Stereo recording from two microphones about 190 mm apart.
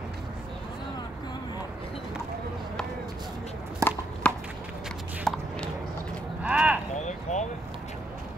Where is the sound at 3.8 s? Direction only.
15° right (ahead or behind).